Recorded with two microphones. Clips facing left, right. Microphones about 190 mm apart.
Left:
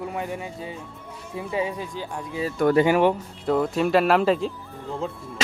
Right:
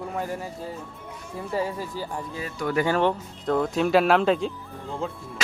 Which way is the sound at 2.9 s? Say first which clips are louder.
Left 3 dB; 10° left (ahead or behind).